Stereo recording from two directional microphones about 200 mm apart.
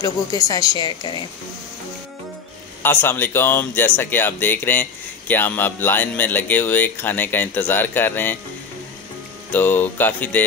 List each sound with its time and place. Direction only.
0.0 s speech: 20° left (ahead or behind)
2.8 s speech: 10° left (ahead or behind)
9.5 s speech: 10° left (ahead or behind)